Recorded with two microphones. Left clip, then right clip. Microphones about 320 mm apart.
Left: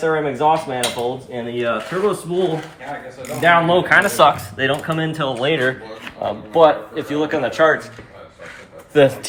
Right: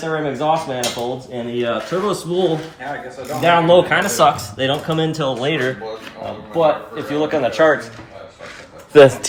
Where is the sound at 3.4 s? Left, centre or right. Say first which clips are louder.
Right 2 dB; centre.